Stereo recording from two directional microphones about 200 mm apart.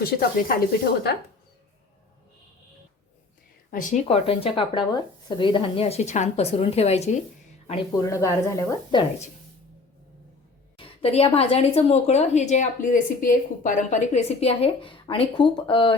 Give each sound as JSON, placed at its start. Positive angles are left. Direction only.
{"t": 0.0, "sound": "speech", "side_deg": 45}
{"t": 3.7, "sound": "speech", "side_deg": 40}
{"t": 8.0, "sound": "a woman's voice", "side_deg": 15}
{"t": 10.8, "sound": "a woman's voice", "side_deg": 30}